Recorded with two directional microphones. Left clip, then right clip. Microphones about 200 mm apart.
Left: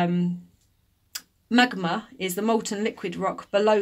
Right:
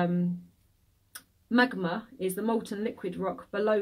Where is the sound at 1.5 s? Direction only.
45° left (ahead or behind).